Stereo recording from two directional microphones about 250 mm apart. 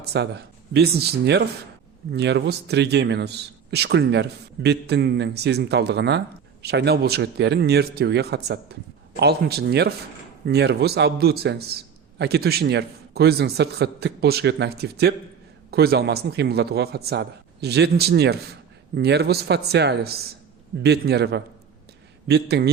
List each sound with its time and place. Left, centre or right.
0.0 s a man's voice: right